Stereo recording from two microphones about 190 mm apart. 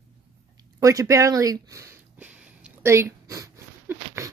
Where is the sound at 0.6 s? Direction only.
20° right (ahead or behind).